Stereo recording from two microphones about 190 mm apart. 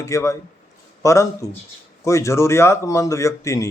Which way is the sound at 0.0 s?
15° left (ahead or behind).